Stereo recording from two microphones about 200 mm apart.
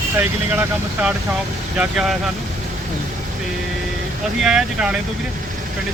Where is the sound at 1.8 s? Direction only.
Centre (ahead or behind).